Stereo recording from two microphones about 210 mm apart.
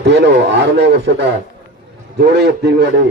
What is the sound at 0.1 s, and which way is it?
A man's voice, 55° right (ahead or behind).